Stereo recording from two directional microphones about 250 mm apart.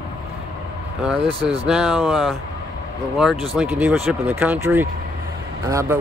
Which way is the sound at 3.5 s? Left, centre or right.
Centre.